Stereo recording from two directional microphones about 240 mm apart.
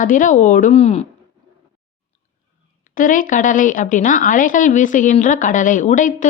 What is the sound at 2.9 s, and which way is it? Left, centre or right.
A woman's voice, left.